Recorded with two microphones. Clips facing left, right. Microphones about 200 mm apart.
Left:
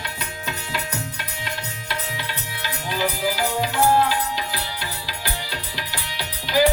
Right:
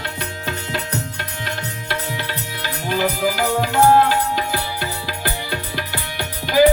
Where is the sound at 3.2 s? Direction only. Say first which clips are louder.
Right 4 dB; 55° right (ahead or behind).